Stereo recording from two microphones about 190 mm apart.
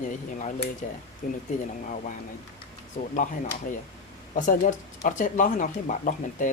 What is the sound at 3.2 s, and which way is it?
Speech, 45° left (ahead or behind).